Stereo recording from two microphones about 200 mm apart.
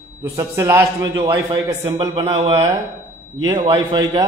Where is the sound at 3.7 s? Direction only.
20° right (ahead or behind).